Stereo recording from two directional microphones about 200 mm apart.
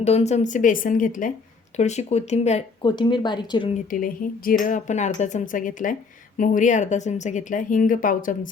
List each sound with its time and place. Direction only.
0.0 s speech: 35° left (ahead or behind)
2.8 s speech: 25° left (ahead or behind)
3.8 s speech: 45° left (ahead or behind)